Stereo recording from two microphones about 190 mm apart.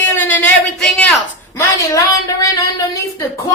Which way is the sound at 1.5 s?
15° left (ahead or behind).